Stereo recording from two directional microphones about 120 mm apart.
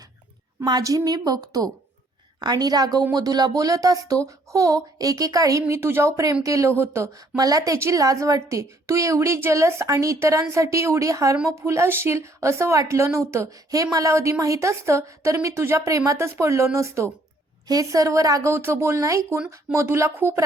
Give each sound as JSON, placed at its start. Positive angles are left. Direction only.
{"t": 0.6, "sound": "a woman's voice", "side_deg": -30}